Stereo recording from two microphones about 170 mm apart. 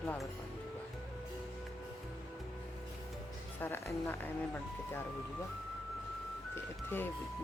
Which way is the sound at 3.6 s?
10° left (ahead or behind).